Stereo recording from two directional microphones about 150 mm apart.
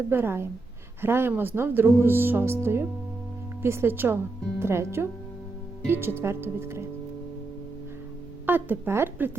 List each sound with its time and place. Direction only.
0.1 s speech: 15° right (ahead or behind)
8.4 s speech: 15° right (ahead or behind)